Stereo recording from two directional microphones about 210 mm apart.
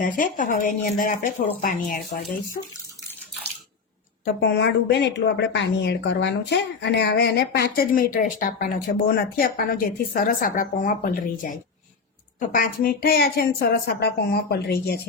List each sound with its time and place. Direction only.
0.0 s speech: 40° left (ahead or behind)
4.4 s speech: 55° left (ahead or behind)